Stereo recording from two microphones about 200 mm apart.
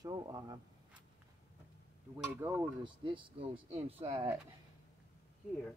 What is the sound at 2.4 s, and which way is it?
Speech, 10° right (ahead or behind).